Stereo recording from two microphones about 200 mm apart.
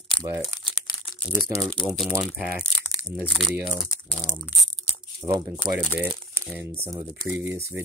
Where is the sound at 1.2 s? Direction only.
Centre (ahead or behind).